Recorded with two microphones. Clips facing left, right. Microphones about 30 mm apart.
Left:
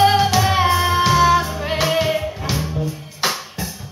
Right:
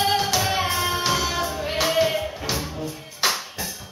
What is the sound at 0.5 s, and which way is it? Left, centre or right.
Music, left.